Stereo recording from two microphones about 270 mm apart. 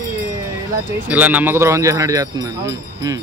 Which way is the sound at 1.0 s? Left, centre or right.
Centre.